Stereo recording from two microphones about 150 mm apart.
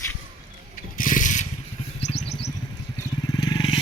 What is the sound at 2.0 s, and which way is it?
Vehicle, 45° left (ahead or behind).